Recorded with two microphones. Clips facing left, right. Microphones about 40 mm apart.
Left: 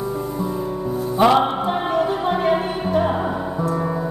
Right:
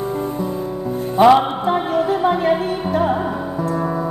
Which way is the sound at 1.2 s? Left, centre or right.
Centre.